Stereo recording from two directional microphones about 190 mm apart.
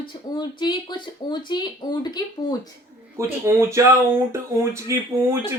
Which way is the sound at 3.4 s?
15° right (ahead or behind).